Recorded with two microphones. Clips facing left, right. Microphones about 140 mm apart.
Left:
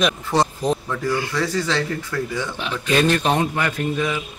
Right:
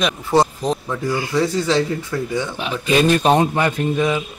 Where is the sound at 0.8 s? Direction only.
15° right (ahead or behind).